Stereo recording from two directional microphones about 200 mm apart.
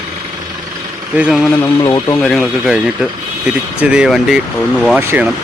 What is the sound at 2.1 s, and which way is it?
Speech, centre (ahead or behind).